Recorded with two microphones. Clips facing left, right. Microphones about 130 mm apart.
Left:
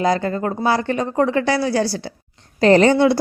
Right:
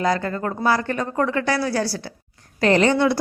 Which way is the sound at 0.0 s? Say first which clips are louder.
Left 3 dB; 25° left (ahead or behind).